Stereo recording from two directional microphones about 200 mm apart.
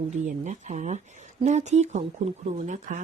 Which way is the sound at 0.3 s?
35° right (ahead or behind).